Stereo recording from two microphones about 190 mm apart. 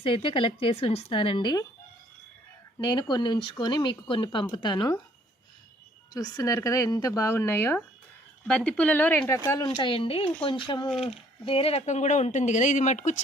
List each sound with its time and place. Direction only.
0.0 s a woman's voice: 30° left (ahead or behind)
2.7 s a woman's voice: 20° left (ahead or behind)
6.1 s a woman's voice: 15° left (ahead or behind); by 13.2 s 35° left (ahead or behind)